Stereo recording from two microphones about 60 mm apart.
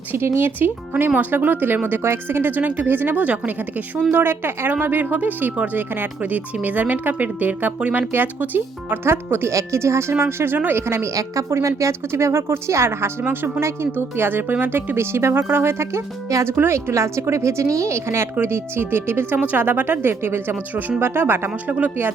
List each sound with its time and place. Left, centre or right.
0.3 s speech: right
4.1 s speech: right
7.8 s speech: centre
8.1 s speech: right
9.5 s a woman's voice: right
11.1 s a woman's voice: right